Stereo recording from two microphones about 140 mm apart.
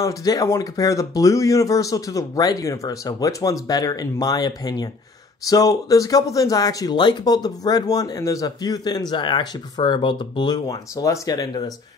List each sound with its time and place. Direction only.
0.0 s speech: 25° left (ahead or behind)